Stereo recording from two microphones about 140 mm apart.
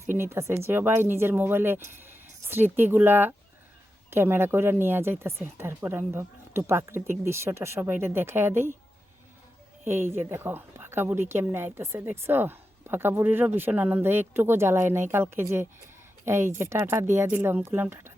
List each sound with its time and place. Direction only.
0.0 s a woman's voice: 20° right (ahead or behind)
9.8 s a woman's voice: 20° right (ahead or behind)